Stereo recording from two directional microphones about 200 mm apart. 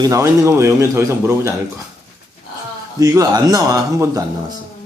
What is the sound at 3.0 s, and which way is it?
A man's voice, 15° right (ahead or behind).